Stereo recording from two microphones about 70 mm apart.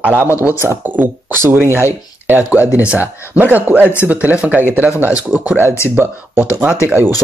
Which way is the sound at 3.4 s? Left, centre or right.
Right.